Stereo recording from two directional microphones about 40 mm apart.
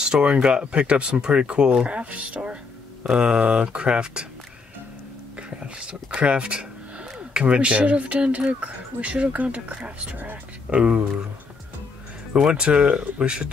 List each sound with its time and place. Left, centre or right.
0.0 s speech: right
5.5 s speech: right
10.1 s speech: right
10.7 s speech: right
12.4 s speech: right